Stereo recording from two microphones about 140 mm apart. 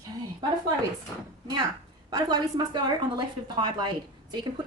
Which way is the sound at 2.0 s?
30° right (ahead or behind).